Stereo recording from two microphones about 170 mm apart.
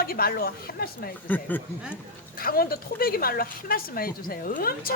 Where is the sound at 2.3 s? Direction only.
60° left (ahead or behind).